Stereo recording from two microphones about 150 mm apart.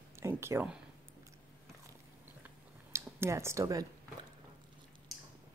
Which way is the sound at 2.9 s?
15° right (ahead or behind).